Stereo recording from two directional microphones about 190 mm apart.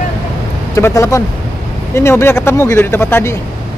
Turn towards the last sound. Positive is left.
turn(degrees=10)  # may be behind; listen again after turning